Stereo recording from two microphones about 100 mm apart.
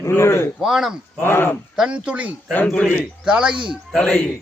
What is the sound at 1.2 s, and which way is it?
Speech, 20° left (ahead or behind).